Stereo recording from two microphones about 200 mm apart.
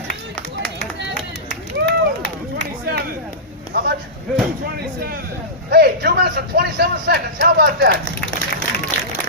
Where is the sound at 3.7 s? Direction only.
50° right (ahead or behind).